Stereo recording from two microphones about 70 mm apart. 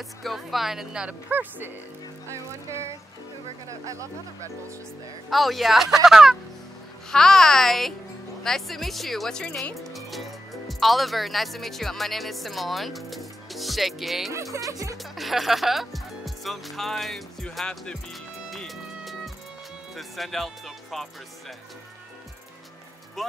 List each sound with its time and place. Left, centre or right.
0.2 s speech: centre
1.3 s speech: right
2.3 s music: right
3.6 s speech: right
5.3 s speech: centre
7.1 s a child's voice: centre
9.8 s speech: centre
14.3 s speech: right
15.1 s speech: centre
18.7 s music: centre
20.0 s speech: centre
23.2 s speech: centre